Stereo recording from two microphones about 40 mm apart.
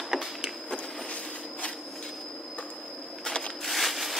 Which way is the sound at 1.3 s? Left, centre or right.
Left.